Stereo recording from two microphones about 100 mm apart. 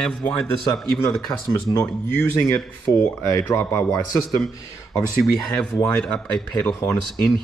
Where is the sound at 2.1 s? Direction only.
25° left (ahead or behind).